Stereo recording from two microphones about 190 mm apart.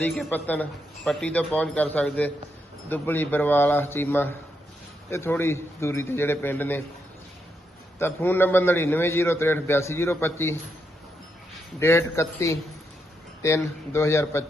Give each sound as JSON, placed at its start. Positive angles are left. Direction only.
{"t": 0.0, "sound": "a man's voice", "side_deg": 10}
{"t": 7.9, "sound": "a man's voice", "side_deg": 10}
{"t": 11.8, "sound": "a man's voice", "side_deg": 15}